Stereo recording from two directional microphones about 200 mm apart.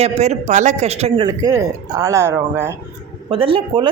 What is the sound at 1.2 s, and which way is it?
Speech, 15° right (ahead or behind).